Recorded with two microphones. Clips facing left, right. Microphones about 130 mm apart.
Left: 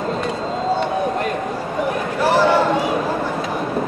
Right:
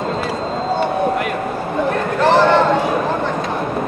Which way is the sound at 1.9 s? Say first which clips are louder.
Right 4 dB; 10° left (ahead or behind).